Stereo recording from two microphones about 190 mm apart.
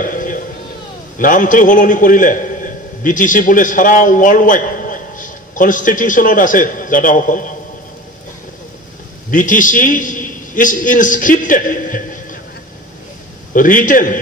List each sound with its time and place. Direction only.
0.0 s a sound: 45° left (ahead or behind)
1.1 s a man's voice: 45° left (ahead or behind)
9.3 s a man's voice: 45° left (ahead or behind)
13.5 s a man's voice: 45° left (ahead or behind)